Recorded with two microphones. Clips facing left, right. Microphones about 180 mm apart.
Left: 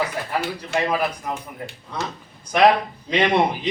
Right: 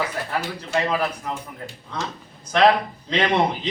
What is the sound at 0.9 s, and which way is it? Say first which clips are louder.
Speech: left 2 dB; 10° left (ahead or behind).